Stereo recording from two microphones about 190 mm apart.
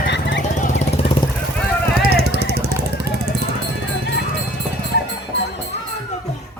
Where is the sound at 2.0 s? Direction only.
55° right (ahead or behind).